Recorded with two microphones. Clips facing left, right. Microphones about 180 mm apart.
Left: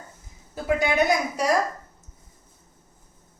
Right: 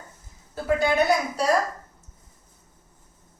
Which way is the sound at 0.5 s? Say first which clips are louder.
Right 1 dB; 10° left (ahead or behind).